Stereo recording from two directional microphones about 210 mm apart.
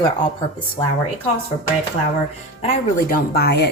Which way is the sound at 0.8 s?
25° left (ahead or behind).